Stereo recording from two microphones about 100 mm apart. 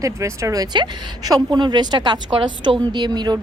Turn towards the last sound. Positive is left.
turn(degrees=-45)  # may be behind; listen again after turning